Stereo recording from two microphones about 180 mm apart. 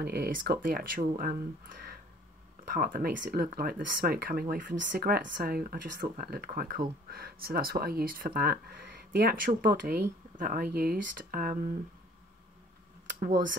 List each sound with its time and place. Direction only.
0.0 s speech: 60° right (ahead or behind)